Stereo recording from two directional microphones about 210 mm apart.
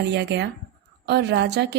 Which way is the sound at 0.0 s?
55° right (ahead or behind).